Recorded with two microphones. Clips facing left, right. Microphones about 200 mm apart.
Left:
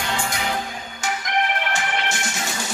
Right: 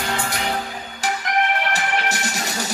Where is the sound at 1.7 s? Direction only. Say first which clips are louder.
Right 2 dB; 40° right (ahead or behind).